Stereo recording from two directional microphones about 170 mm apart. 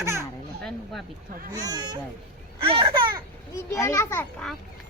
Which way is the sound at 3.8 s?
15° left (ahead or behind).